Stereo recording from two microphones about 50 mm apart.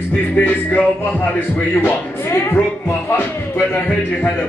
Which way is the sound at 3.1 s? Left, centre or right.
Left.